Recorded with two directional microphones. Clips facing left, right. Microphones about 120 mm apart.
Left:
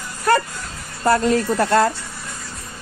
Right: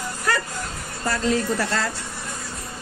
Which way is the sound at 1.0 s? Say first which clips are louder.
Left 6 dB; 50° left (ahead or behind).